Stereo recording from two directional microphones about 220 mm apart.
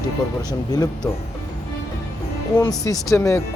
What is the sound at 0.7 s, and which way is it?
Speech, 15° left (ahead or behind).